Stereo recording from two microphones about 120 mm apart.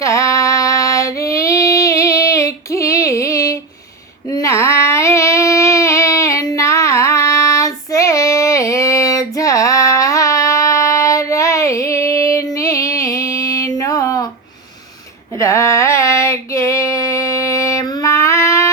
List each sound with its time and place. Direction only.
0.0 s female singing: 25° left (ahead or behind)
4.3 s a sound: 25° left (ahead or behind)
15.4 s female singing: 25° left (ahead or behind)